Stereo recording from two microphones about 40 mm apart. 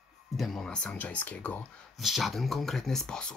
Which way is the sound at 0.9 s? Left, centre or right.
Left.